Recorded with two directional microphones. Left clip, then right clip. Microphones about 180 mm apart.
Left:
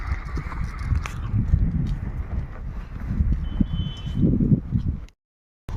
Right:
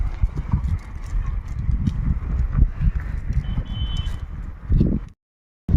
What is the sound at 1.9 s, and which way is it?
Clip-clop, 15° right (ahead or behind).